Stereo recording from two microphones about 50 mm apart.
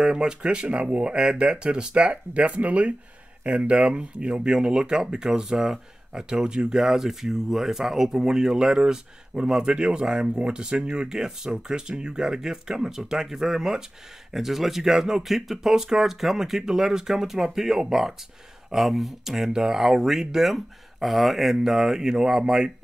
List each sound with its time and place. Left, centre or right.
0.0 s speech: centre